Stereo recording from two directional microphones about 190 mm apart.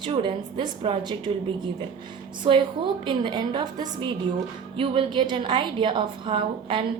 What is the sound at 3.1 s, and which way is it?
A woman's voice, 25° right (ahead or behind).